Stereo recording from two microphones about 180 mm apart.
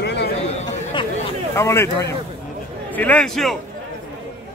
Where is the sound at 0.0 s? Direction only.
70° left (ahead or behind).